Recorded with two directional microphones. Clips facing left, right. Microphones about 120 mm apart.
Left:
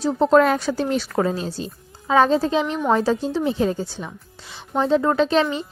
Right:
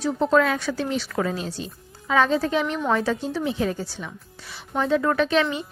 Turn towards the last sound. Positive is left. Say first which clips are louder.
# left 3 dB
turn(degrees=30)  # may be behind; listen again after turning